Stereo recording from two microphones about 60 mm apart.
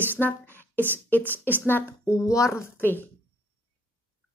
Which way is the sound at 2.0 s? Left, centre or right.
Left.